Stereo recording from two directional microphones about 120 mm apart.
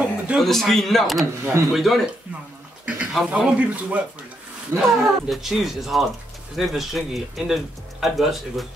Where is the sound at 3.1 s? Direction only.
10° right (ahead or behind).